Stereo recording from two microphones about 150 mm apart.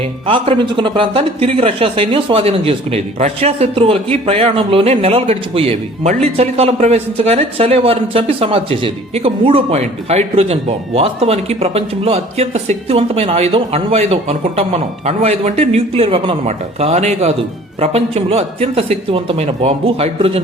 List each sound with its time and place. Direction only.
0.3 s speech: 35° right (ahead or behind)
16.5 s speech: 50° right (ahead or behind)